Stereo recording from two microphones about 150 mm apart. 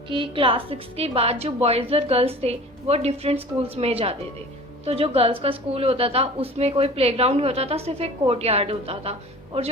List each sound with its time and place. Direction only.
0.1 s a woman's voice: 35° right (ahead or behind)